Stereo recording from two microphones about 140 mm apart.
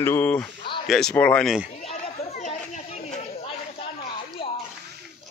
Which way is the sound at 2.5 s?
55° left (ahead or behind).